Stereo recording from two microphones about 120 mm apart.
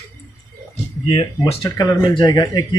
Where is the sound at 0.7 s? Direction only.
50° left (ahead or behind).